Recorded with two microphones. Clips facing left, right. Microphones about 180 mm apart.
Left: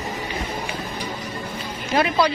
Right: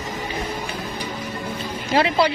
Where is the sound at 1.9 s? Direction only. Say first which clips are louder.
Right 1 dB; 30° right (ahead or behind).